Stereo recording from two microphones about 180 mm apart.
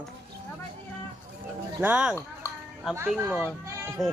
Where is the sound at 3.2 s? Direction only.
10° right (ahead or behind).